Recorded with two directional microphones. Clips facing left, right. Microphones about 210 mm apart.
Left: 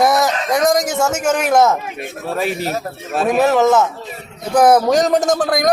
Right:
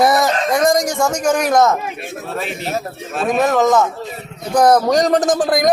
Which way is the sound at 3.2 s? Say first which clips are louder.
Left 1 dB; 5° left (ahead or behind).